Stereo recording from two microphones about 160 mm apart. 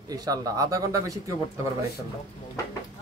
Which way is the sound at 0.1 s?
25° right (ahead or behind).